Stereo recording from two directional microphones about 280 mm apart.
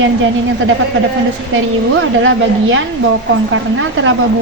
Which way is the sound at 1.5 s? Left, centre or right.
Right.